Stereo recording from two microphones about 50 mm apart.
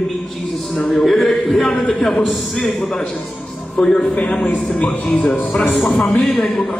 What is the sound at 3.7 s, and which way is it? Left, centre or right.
Speech, centre.